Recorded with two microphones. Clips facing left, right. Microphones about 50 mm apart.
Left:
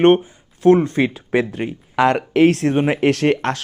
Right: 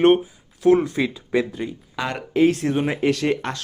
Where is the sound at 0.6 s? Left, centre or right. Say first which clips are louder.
Left 4 dB; left.